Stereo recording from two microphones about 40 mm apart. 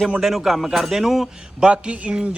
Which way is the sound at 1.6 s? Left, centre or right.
Right.